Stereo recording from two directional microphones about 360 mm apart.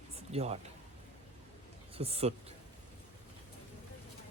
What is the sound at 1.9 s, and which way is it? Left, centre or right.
Speech, centre.